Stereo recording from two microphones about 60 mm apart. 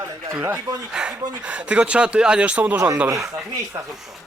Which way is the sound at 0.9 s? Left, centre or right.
Centre.